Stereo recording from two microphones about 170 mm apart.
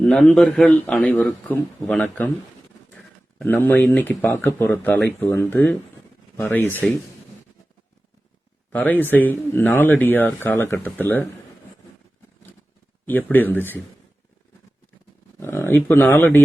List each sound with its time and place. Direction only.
0.0 s a man's voice: 5° left (ahead or behind)
3.3 s speech: 10° left (ahead or behind)
8.7 s speech: 10° left (ahead or behind)
13.1 s speech: 10° left (ahead or behind)
15.4 s speech: 15° left (ahead or behind)